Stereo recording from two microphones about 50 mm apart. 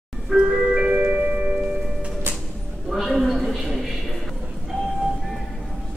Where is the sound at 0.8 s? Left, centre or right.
Right.